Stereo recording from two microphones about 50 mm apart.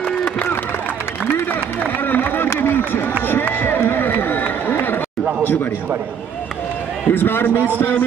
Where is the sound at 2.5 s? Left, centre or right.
Left.